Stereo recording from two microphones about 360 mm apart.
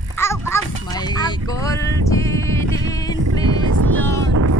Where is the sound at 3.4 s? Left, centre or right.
Right.